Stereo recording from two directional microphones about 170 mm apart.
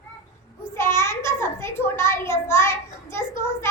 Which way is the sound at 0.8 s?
15° left (ahead or behind).